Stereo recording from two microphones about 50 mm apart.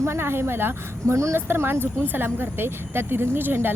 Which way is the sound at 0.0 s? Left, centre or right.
Right.